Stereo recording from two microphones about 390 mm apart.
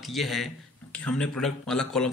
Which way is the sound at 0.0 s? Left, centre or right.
Centre.